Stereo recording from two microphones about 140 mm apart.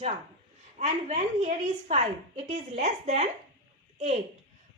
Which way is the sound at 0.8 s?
55° right (ahead or behind).